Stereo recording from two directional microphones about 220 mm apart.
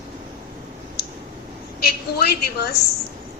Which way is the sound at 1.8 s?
45° left (ahead or behind).